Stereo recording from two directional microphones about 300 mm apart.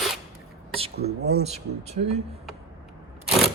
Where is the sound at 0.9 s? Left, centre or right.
Right.